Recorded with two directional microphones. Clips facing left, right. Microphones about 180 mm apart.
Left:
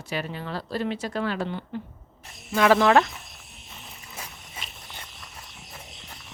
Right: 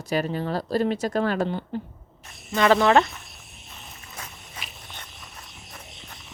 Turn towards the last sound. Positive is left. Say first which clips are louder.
# even
turn(degrees=10)  # may be behind; listen again after turning